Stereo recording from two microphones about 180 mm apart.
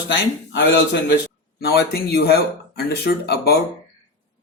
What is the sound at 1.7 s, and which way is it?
Speech, 65° left (ahead or behind).